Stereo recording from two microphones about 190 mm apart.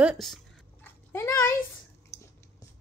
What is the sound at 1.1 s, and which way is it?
Speech, 15° left (ahead or behind).